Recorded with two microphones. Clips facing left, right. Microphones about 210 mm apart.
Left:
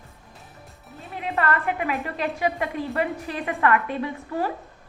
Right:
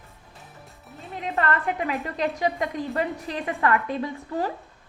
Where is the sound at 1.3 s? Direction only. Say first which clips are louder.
Left 1 dB; 40° right (ahead or behind).